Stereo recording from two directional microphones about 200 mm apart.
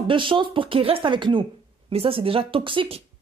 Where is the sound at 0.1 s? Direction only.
25° right (ahead or behind).